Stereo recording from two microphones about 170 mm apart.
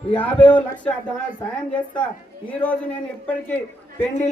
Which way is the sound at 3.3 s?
10° left (ahead or behind).